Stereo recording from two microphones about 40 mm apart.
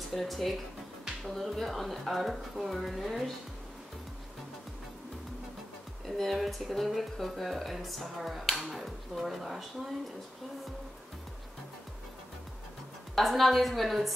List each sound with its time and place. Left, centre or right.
0.1 s speech: centre
6.0 s speech: centre
13.1 s speech: centre